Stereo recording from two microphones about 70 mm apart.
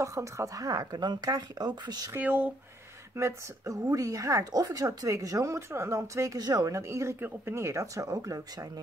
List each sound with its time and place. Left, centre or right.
0.0 s speech: right
0.7 s speech: right
2.1 s speech: right
3.2 s speech: right
6.3 s speech: right
6.7 s speech: right
7.2 s speech: right